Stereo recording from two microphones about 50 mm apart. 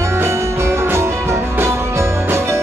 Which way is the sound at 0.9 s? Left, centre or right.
Right.